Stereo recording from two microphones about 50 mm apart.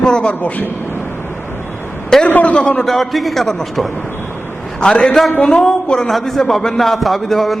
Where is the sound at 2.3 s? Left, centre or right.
Left.